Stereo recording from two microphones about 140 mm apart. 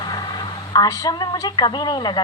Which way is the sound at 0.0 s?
30° left (ahead or behind).